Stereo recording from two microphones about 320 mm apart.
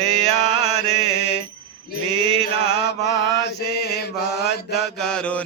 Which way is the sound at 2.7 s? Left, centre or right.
Left.